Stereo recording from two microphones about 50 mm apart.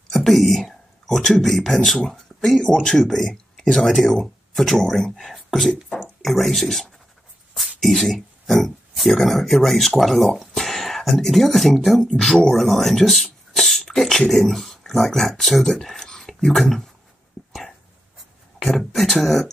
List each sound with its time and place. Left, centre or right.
0.1 s a sound: centre
1.0 s speech: centre
17.5 s dog: centre
18.7 s speech: centre